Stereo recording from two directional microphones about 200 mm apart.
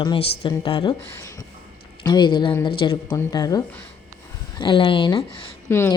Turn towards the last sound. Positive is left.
turn(degrees=10)  # may be behind; listen again after turning